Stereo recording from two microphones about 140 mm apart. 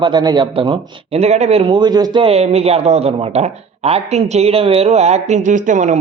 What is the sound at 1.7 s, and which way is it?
Speech, 30° right (ahead or behind).